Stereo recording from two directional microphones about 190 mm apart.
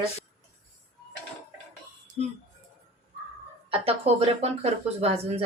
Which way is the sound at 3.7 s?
30° right (ahead or behind).